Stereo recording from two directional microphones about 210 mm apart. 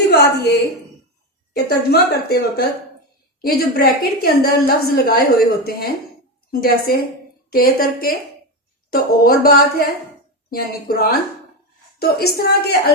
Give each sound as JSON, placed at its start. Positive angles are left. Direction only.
{"t": 0.1, "sound": "a woman's voice", "side_deg": 50}
{"t": 1.5, "sound": "a woman's voice", "side_deg": 50}